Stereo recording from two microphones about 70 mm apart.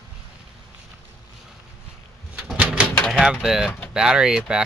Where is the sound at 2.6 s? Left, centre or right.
Centre.